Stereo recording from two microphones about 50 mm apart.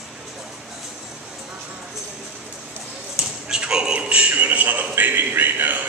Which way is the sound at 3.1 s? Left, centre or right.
Centre.